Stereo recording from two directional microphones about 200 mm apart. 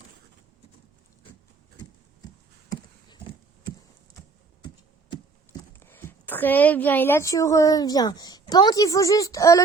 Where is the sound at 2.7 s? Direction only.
20° left (ahead or behind).